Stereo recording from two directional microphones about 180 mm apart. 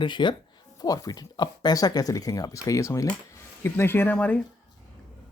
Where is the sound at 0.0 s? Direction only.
25° left (ahead or behind); by 4.4 s 10° left (ahead or behind).